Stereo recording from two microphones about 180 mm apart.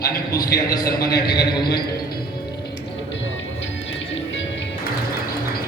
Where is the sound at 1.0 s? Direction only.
20° left (ahead or behind).